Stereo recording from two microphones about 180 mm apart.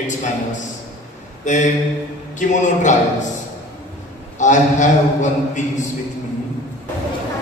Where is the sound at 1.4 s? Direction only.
40° left (ahead or behind).